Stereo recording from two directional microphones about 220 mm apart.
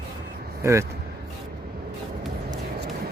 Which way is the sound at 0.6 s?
10° right (ahead or behind).